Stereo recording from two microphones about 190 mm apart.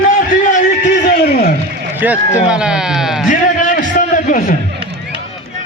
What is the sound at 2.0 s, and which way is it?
Speech, 10° right (ahead or behind).